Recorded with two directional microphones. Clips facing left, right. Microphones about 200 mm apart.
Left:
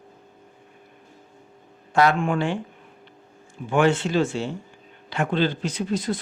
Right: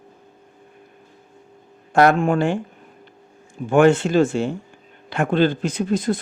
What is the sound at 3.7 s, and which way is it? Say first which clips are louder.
Speech: right 5 dB; 50° right (ahead or behind).